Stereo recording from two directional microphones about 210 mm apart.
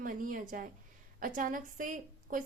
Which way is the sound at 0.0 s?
40° right (ahead or behind).